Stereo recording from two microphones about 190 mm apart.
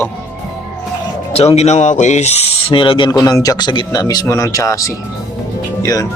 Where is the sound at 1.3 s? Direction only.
35° left (ahead or behind); by 4.9 s 15° left (ahead or behind).